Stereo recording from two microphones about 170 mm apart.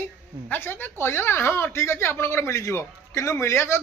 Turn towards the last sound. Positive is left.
turn(degrees=15)  # may be behind; listen again after turning